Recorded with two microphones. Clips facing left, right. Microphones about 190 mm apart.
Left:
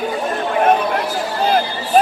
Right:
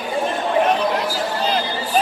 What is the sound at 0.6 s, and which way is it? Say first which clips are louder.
Chatter: left 3 dB; 50° left (ahead or behind).